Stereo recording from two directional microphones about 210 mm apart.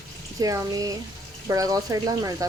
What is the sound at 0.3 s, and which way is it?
Speech, 15° right (ahead or behind).